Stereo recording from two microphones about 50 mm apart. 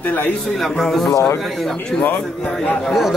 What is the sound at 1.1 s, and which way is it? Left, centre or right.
Speech, left.